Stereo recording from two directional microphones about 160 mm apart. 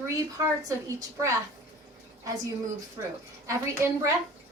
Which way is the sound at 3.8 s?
15° right (ahead or behind).